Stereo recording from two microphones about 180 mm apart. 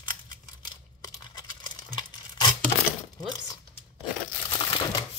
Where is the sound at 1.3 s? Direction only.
25° left (ahead or behind).